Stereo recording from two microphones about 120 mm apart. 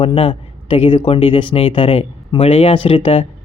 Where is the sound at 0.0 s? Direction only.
50° left (ahead or behind).